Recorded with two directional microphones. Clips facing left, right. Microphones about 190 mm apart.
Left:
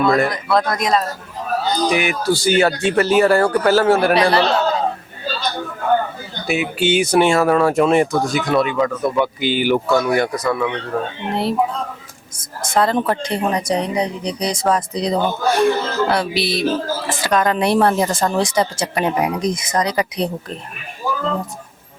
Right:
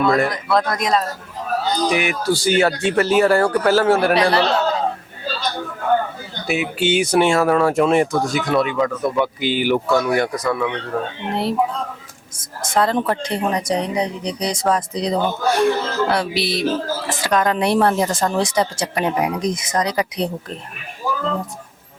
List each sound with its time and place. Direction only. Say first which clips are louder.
0.0 s speech: left 1 dB; 10° left (ahead or behind)
5.5 s speech: left 1 dB; 20° left (ahead or behind)
8.7 s speech: left 1 dB; 20° left (ahead or behind)
9.1 s speech: left 1 dB; 10° left (ahead or behind)
10.3 s speech: left 1 dB; 20° left (ahead or behind)
12.6 s speech: left 1 dB; 10° left (ahead or behind)
21.0 s a sound: left 1 dB; 20° left (ahead or behind)